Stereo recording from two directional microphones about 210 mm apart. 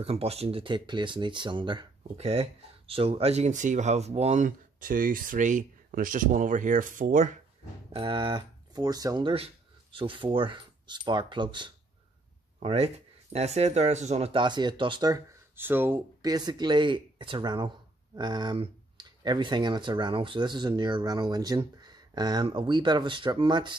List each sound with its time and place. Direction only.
0.0 s speech: 30° right (ahead or behind)
7.9 s speech: 25° right (ahead or behind)